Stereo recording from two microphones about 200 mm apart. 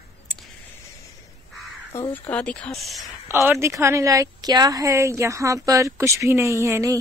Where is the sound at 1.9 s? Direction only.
15° left (ahead or behind).